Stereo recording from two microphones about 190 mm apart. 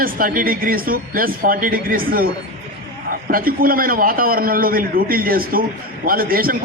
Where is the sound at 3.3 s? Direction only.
50° right (ahead or behind).